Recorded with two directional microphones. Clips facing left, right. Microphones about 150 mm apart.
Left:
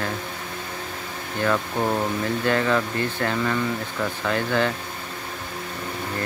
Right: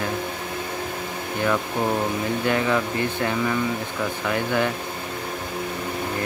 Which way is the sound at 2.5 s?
15° right (ahead or behind).